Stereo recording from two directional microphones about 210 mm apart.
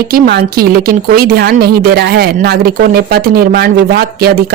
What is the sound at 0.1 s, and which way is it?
Speech, 50° right (ahead or behind).